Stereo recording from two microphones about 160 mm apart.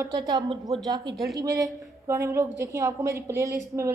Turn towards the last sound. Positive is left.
turn(degrees=-20)  # may be behind; listen again after turning